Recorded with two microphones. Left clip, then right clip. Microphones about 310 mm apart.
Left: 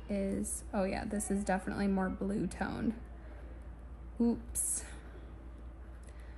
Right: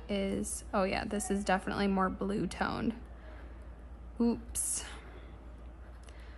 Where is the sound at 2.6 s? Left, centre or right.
Centre.